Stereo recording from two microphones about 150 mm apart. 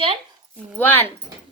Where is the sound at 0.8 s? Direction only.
15° left (ahead or behind).